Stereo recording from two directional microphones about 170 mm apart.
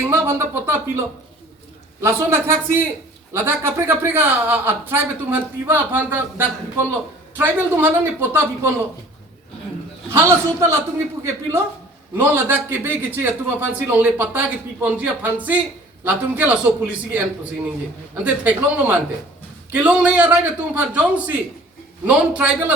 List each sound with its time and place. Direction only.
0.1 s a man's voice: 15° right (ahead or behind)
2.0 s a man's voice: 15° right (ahead or behind)
10.1 s a man's voice: 15° right (ahead or behind)